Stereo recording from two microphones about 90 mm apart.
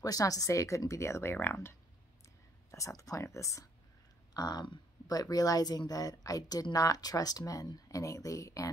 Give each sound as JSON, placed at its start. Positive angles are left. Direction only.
{"t": 0.0, "sound": "speech", "side_deg": 40}
{"t": 2.7, "sound": "speech", "side_deg": 35}
{"t": 4.3, "sound": "speech", "side_deg": 50}